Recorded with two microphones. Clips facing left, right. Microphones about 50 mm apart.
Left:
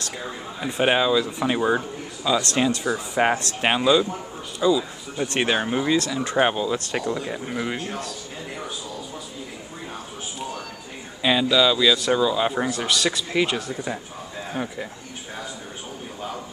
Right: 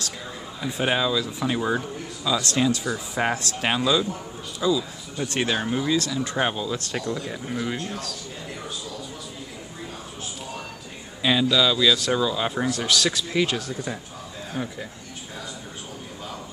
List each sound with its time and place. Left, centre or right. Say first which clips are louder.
0.6 s speech: left 3 dB; left
11.2 s speech: left 2 dB; centre